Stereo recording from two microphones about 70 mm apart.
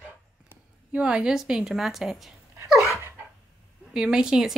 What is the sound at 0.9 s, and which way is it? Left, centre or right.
A woman's voice, centre.